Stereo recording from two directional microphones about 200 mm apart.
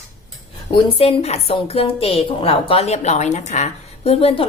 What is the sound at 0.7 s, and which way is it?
A woman's voice, 25° left (ahead or behind).